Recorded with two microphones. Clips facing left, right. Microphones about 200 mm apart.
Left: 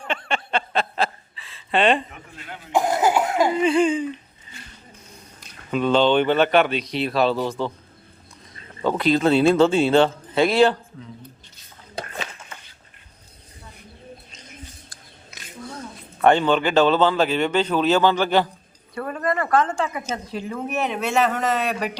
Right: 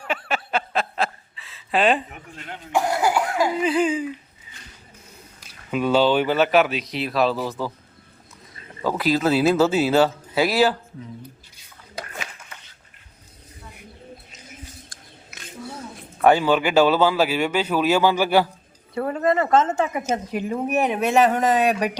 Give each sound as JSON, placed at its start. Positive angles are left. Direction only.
{"t": 0.0, "sound": "chuckle", "side_deg": -5}
{"t": 2.7, "sound": "cough", "side_deg": 20}
{"t": 3.6, "sound": "speech", "side_deg": -5}
{"t": 4.5, "sound": "a sound", "side_deg": -10}
{"t": 5.4, "sound": "speech", "side_deg": -5}
{"t": 8.8, "sound": "speech", "side_deg": -5}
{"t": 14.3, "sound": "a sound", "side_deg": -5}
{"t": 16.2, "sound": "speech", "side_deg": -5}
{"t": 18.9, "sound": "a woman's voice", "side_deg": -25}